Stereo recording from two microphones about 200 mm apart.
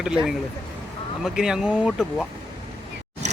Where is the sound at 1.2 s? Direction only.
5° right (ahead or behind).